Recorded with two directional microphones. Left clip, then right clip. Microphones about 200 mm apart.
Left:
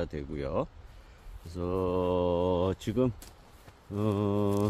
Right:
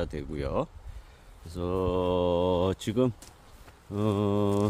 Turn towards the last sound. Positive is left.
turn(degrees=-15)  # may be behind; listen again after turning